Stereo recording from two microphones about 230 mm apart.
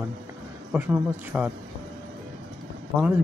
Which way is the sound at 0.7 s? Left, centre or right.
Centre.